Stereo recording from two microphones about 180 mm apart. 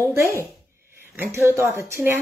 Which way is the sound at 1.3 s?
15° right (ahead or behind).